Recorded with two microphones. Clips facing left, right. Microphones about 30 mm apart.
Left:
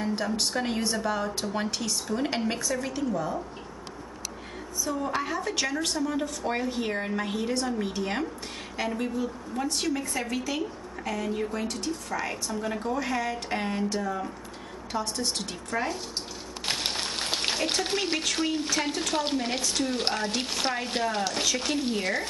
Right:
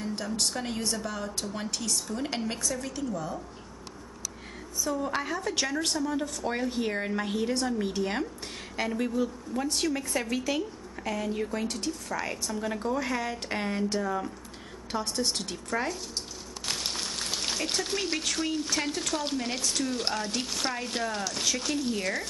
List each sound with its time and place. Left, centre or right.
0.0 s speech: left
4.9 s a woman's voice: centre
5.9 s a woman's voice: centre
14.9 s a woman's voice: centre
15.3 s speech: centre
16.6 s a sound: left
18.1 s speech: centre